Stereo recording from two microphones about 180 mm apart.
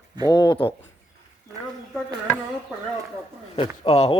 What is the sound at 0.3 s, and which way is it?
Speech, 25° left (ahead or behind).